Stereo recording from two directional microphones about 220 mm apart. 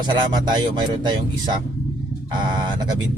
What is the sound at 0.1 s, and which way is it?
Speech, 20° right (ahead or behind).